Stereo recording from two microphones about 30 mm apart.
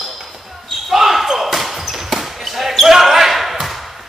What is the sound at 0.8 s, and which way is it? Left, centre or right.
Basketball bounce, centre.